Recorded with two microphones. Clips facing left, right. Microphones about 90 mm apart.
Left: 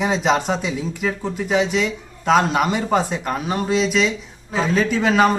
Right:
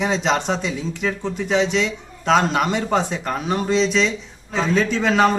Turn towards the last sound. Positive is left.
turn(degrees=5)  # may be behind; listen again after turning